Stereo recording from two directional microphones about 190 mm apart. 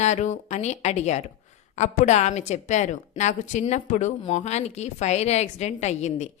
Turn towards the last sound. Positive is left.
turn(degrees=35)  # may be behind; listen again after turning